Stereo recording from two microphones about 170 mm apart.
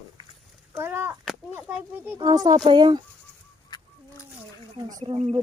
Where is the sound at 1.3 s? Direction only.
5° right (ahead or behind); by 3.0 s 25° right (ahead or behind).